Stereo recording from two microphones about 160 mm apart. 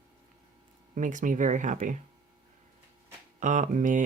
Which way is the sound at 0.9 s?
55° right (ahead or behind).